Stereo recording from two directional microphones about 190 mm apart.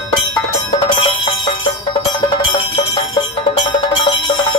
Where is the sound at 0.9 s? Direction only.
25° left (ahead or behind).